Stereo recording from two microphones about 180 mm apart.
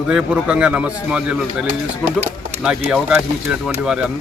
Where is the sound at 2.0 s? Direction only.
40° right (ahead or behind).